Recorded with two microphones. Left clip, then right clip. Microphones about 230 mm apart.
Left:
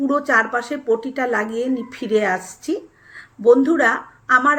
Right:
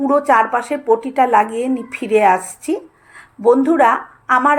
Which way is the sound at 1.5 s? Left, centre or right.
Right.